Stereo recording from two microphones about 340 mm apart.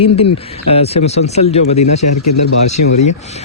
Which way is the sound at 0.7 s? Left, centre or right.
Centre.